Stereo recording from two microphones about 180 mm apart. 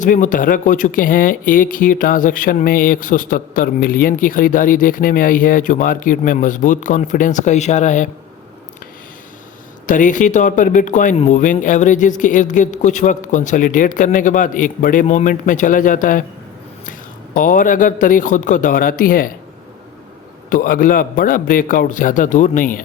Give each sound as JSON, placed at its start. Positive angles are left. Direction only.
{"t": 0.0, "sound": "speech", "side_deg": 45}
{"t": 9.8, "sound": "speech", "side_deg": 45}
{"t": 17.3, "sound": "speech", "side_deg": 50}
{"t": 20.5, "sound": "speech", "side_deg": 50}